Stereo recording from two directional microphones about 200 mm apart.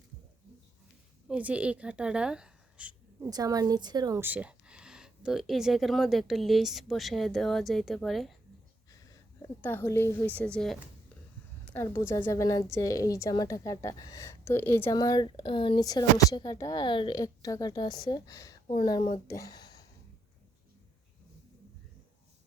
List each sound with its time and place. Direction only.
1.3 s a woman's voice: 5° right (ahead or behind)
3.2 s speech: 20° right (ahead or behind); by 8.4 s centre (ahead or behind)
9.4 s a woman's voice: 10° left (ahead or behind)